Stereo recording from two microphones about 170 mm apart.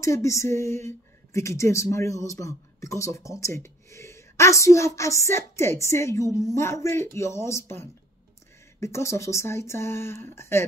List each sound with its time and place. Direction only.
0.0 s speech: 15° left (ahead or behind)